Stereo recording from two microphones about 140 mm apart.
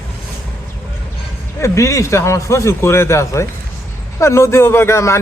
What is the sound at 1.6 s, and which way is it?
A man's voice, 20° left (ahead or behind).